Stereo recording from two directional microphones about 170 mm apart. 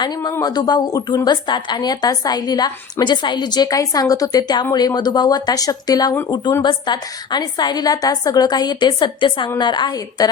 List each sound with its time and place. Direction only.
0.0 s a woman's voice: 20° left (ahead or behind)